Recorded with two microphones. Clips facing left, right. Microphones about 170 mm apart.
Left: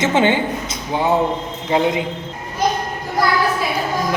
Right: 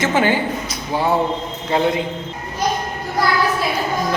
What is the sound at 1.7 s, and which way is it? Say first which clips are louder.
Speech: left 1 dB; 15° left (ahead or behind).